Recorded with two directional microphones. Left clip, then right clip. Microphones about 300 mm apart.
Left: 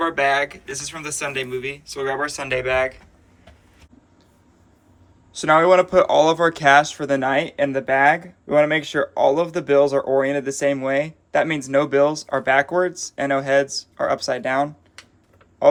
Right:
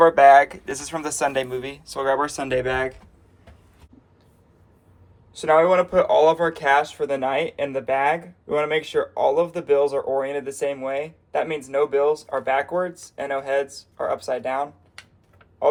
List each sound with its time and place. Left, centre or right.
0.6 s speech: centre
5.3 s speech: left